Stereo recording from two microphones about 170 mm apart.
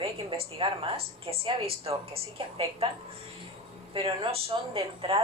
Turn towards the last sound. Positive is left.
turn(degrees=-35)  # may be behind; listen again after turning